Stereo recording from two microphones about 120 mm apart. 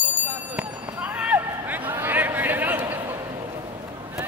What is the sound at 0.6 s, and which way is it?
Run, 10° right (ahead or behind).